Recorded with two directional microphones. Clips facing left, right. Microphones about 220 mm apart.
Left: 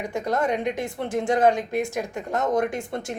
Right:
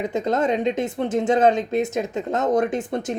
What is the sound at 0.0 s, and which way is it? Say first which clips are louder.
Speech: right 3 dB; 20° right (ahead or behind).